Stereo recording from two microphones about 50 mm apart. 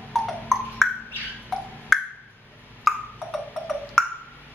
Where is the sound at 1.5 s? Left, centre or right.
Centre.